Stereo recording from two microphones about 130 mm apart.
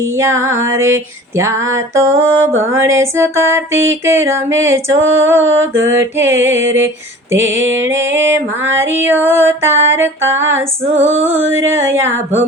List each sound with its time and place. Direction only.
0.0 s female singing: 20° right (ahead or behind)
11.2 s music: 15° right (ahead or behind)